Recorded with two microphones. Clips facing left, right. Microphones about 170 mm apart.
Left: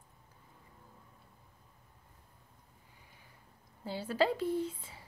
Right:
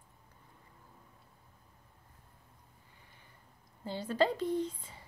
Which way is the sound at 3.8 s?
5° left (ahead or behind).